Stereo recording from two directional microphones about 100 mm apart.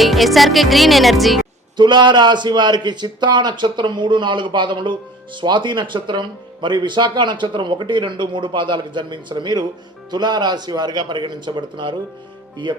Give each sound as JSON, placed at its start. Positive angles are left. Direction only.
{"t": 0.0, "sound": "music", "side_deg": 0}
{"t": 1.7, "sound": "a man's voice", "side_deg": -50}